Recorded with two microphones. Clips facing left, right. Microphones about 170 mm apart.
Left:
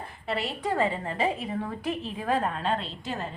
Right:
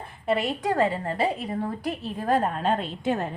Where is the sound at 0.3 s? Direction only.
50° right (ahead or behind).